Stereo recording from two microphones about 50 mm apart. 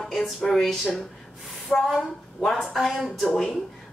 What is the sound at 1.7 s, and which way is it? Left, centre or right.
Speech, left.